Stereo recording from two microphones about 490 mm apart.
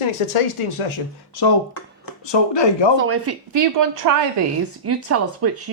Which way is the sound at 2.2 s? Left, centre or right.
Left.